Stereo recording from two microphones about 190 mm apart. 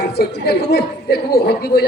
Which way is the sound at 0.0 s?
55° left (ahead or behind).